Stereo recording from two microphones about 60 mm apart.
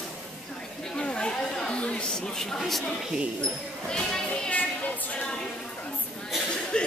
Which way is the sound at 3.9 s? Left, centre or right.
Centre.